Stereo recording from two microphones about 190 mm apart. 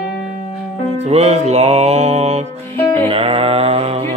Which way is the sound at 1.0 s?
35° right (ahead or behind).